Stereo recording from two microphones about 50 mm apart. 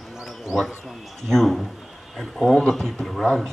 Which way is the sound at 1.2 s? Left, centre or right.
Centre.